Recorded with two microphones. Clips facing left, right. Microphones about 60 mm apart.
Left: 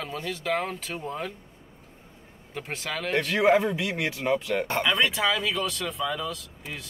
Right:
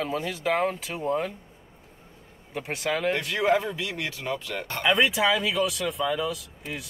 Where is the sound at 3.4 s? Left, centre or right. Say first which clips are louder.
Left 2 dB; centre.